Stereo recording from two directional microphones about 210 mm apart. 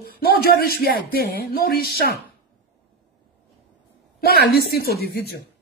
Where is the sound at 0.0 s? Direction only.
45° left (ahead or behind).